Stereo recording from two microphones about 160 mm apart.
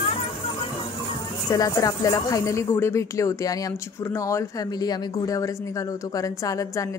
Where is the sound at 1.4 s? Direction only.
25° left (ahead or behind).